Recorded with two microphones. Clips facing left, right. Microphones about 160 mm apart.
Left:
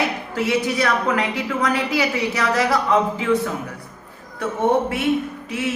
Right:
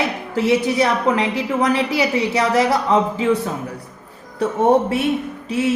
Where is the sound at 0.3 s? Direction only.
30° right (ahead or behind).